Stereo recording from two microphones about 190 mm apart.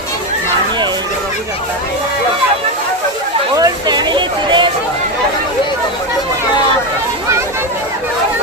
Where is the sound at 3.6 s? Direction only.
20° right (ahead or behind).